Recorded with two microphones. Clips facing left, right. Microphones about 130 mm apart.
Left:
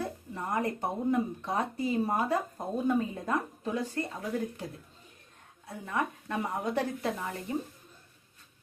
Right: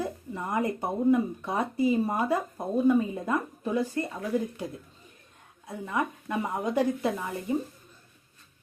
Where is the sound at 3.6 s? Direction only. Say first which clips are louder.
Right 4 dB; 10° right (ahead or behind).